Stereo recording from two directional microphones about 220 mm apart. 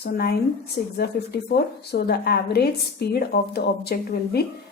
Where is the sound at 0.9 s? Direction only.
45° left (ahead or behind).